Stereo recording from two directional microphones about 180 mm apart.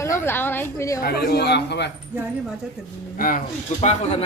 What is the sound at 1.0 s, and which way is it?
Speech, 60° left (ahead or behind).